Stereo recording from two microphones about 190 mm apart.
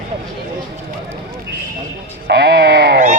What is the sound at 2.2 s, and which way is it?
Speech, 60° right (ahead or behind).